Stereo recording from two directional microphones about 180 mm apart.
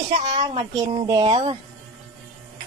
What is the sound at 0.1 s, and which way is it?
Speech, 40° right (ahead or behind).